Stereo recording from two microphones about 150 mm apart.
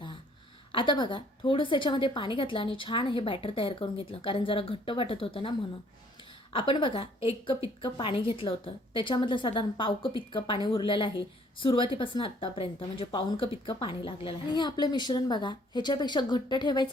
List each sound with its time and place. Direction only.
0.7 s speech: 35° left (ahead or behind)